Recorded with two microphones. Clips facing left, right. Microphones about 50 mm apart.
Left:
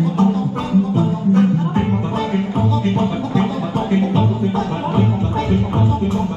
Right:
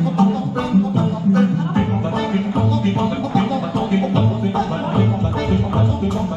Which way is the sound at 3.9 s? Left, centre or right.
Left.